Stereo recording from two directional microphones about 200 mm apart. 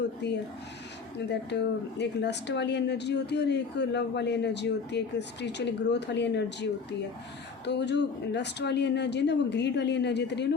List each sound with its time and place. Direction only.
0.2 s speech: 55° left (ahead or behind)